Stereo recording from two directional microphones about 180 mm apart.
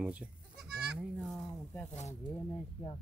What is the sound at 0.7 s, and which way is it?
Goat, 5° right (ahead or behind).